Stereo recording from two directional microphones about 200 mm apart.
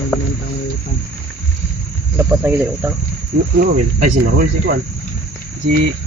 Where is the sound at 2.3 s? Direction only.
10° right (ahead or behind).